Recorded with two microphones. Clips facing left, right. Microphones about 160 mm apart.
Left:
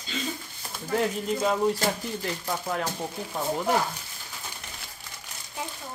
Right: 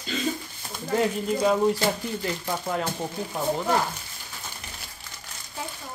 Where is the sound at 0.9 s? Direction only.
Centre (ahead or behind).